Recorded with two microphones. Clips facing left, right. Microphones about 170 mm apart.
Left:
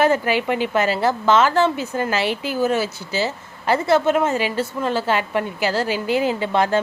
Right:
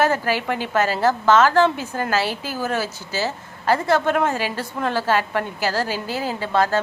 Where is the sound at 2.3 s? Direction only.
55° left (ahead or behind).